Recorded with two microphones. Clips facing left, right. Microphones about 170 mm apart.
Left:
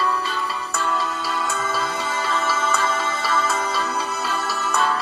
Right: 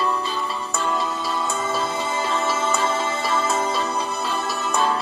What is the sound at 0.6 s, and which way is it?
Music, 10° right (ahead or behind).